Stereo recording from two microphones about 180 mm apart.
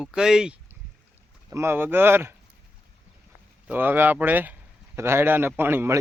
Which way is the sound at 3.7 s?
10° right (ahead or behind).